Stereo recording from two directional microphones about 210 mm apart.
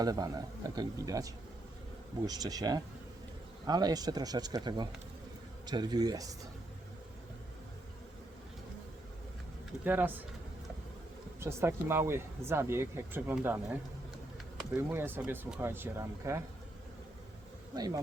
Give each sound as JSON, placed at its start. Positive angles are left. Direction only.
{"t": 0.0, "sound": "speech", "side_deg": -20}
{"t": 9.8, "sound": "speech", "side_deg": -10}
{"t": 11.3, "sound": "speech", "side_deg": -10}
{"t": 14.8, "sound": "speech", "side_deg": -10}
{"t": 17.7, "sound": "speech", "side_deg": -20}